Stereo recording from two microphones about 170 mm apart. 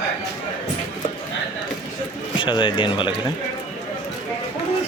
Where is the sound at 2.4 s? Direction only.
30° left (ahead or behind).